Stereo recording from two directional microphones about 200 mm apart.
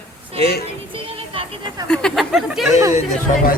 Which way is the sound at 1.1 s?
25° right (ahead or behind).